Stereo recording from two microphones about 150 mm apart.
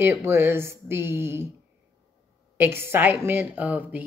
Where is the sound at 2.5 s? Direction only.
15° right (ahead or behind).